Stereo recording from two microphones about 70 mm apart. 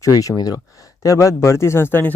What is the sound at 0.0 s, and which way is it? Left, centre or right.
Speech, left.